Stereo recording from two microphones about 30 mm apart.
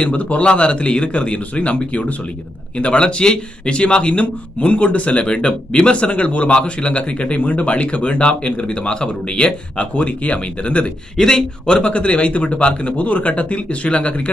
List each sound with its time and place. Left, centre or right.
0.0 s speech: left
0.5 s speech: left
5.2 s speech: left
6.5 s speech: left
6.9 s speech: left
9.8 s speech: left
11.1 s speech: centre
11.6 s speech: left